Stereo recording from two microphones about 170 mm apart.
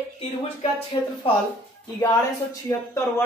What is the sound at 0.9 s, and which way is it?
Speech, 30° left (ahead or behind).